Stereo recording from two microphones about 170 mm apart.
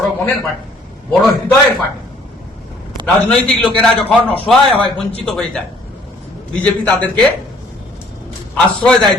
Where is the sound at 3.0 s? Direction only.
5° left (ahead or behind).